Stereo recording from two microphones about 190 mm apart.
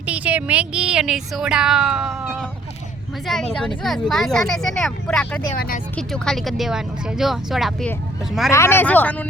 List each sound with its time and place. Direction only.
0.0 s speech: 5° right (ahead or behind)
5.4 s speech: 50° left (ahead or behind)
6.0 s speech: 5° left (ahead or behind)
8.4 s speech: 15° left (ahead or behind)